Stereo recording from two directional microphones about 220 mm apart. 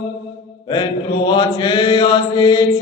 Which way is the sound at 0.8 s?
20° left (ahead or behind).